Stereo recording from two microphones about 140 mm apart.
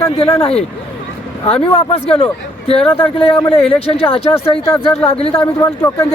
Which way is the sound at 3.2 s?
40° left (ahead or behind).